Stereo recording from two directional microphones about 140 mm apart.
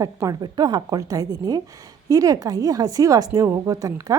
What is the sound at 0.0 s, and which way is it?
A woman's voice, 25° right (ahead or behind).